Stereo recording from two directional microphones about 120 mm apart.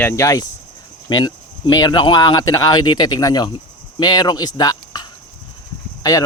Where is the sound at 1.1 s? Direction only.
35° left (ahead or behind).